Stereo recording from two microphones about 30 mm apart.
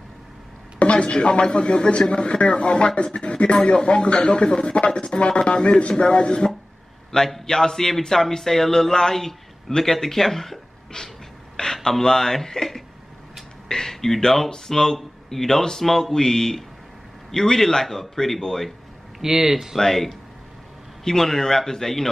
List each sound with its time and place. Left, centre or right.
0.7 s speech: left
7.1 s speech: left
10.9 s speech: left
11.5 s a sound: centre
12.0 s speech: centre
13.7 s speech: centre
19.2 s speech: centre
19.8 s speech: centre